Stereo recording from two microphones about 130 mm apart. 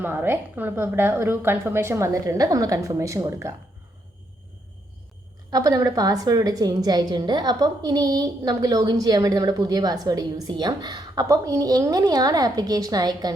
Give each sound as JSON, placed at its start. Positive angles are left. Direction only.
{"t": 0.0, "sound": "a woman's voice", "side_deg": -15}
{"t": 5.5, "sound": "a woman's voice", "side_deg": -30}